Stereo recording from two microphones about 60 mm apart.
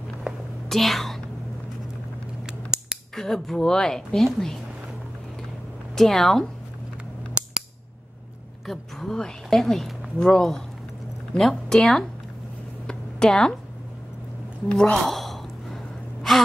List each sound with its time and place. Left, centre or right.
0.3 s whispering: centre
0.7 s speech: centre
3.2 s a woman's voice: centre
5.9 s a woman's voice: centre
7.4 s scissors: centre
8.6 s a woman's voice: centre
12.8 s a sound: centre
14.7 s a woman's voice: centre
15.0 s sigh: centre